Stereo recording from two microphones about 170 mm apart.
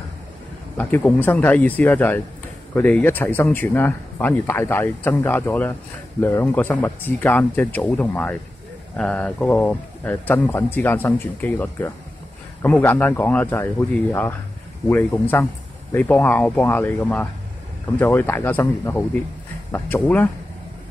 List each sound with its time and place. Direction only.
0.7 s speech: 10° left (ahead or behind)